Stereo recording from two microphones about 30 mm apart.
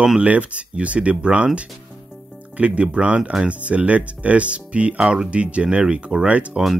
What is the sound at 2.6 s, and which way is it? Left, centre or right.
Speech, right.